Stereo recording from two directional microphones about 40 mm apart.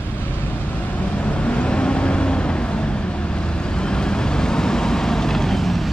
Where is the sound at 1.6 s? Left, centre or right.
Left.